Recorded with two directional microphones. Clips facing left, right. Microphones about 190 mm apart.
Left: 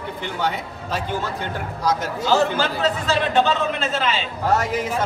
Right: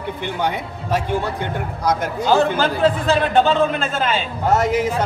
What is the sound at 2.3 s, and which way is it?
A man's voice, 55° right (ahead or behind).